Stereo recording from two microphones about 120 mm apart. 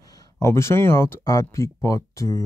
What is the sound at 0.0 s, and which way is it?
Speech, 30° left (ahead or behind).